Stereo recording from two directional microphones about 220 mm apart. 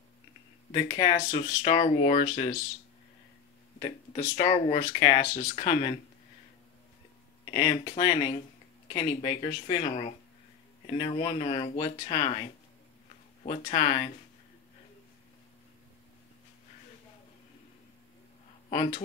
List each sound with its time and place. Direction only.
0.7 s speech: 20° left (ahead or behind)
4.5 s speech: 25° left (ahead or behind)
7.4 s speech: 20° left (ahead or behind)
18.7 s speech: 30° left (ahead or behind)